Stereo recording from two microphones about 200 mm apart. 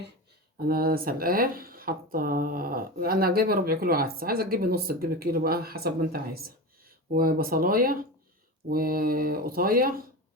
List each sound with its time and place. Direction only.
0.5 s speech: 50° right (ahead or behind)